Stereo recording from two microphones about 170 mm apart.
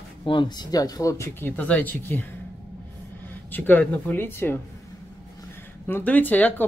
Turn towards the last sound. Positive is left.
turn(degrees=10)  # may be behind; listen again after turning